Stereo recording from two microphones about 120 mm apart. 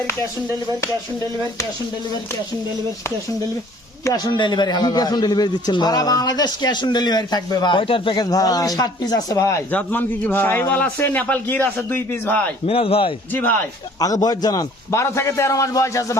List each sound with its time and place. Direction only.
4.0 s speech: 35° left (ahead or behind)
9.7 s a man's voice: 15° left (ahead or behind)
12.6 s a man's voice: 50° left (ahead or behind)
14.0 s a man's voice: 30° left (ahead or behind)